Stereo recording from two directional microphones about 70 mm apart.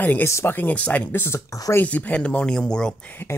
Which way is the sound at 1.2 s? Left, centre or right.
Left.